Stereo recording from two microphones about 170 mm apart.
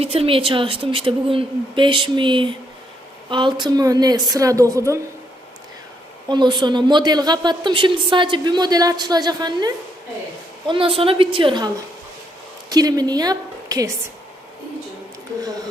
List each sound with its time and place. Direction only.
0.0 s a woman's voice: 35° right (ahead or behind); by 4.9 s 20° right (ahead or behind)
6.2 s a woman's voice: 25° right (ahead or behind)
12.7 s a woman's voice: 20° right (ahead or behind)